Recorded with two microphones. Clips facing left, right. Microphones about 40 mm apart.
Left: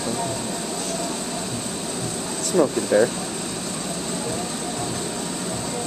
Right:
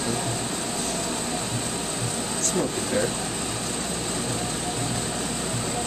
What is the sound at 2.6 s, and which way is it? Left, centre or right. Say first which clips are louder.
Speech: left 9 dB; centre.